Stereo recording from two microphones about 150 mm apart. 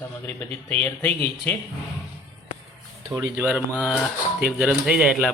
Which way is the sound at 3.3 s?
10° right (ahead or behind).